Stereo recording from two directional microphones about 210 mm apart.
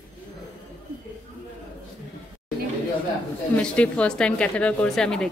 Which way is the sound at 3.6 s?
5° left (ahead or behind).